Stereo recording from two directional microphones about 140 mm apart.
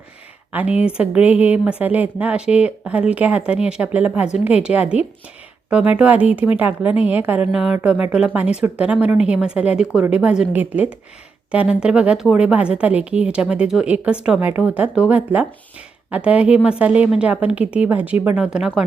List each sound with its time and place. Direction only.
0.5 s speech: 10° right (ahead or behind)